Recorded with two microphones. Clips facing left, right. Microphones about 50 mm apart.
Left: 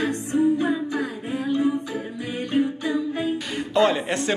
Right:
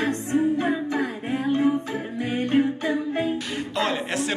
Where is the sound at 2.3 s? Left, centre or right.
Right.